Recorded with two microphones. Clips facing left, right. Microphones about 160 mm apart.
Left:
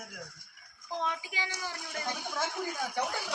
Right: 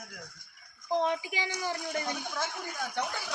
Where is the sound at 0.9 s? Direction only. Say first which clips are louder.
Right 6 dB; 20° right (ahead or behind).